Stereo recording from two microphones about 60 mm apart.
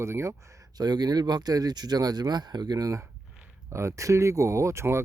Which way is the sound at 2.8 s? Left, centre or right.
Right.